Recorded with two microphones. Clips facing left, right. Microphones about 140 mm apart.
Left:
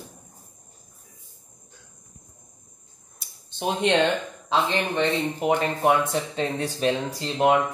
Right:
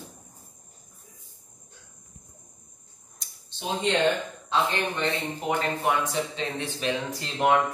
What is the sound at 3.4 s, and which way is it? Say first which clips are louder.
Speech: left 4 dB; 60° left (ahead or behind).